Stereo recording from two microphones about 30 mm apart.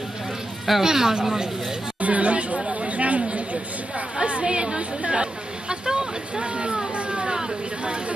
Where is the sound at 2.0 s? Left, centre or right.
Right.